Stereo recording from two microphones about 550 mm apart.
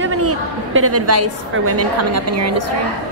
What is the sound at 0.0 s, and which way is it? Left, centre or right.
A woman's voice, right.